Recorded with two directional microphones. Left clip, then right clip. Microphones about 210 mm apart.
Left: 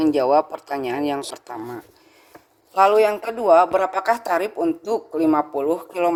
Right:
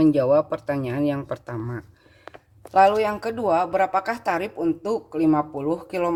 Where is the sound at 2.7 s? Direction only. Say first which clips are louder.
Left 2 dB; 30° left (ahead or behind).